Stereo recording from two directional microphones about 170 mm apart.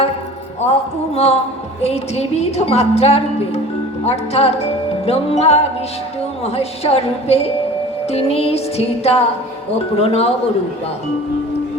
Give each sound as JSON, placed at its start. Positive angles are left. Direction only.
{"t": 0.7, "sound": "a woman's voice", "side_deg": 40}